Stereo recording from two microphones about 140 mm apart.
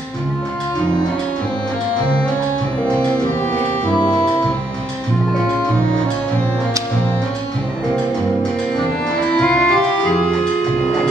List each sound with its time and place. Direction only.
3.9 s music: 30° left (ahead or behind)
9.3 s organ: 5° left (ahead or behind)